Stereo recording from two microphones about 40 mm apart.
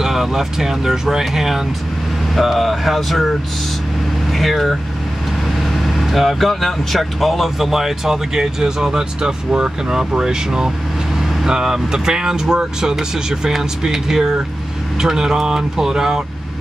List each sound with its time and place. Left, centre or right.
0.0 s speech: centre
2.3 s speech: centre
4.4 s speech: centre
5.9 s speech: centre